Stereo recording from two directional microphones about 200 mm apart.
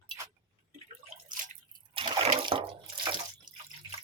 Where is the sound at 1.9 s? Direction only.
25° right (ahead or behind).